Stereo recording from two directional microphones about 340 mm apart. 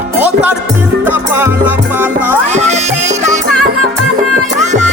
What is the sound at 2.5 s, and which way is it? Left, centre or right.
Music, centre.